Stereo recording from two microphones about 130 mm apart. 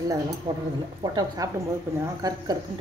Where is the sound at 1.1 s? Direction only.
30° right (ahead or behind).